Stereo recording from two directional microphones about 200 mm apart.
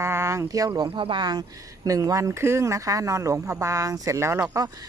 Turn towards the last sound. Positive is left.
turn(degrees=-15)  # may be behind; listen again after turning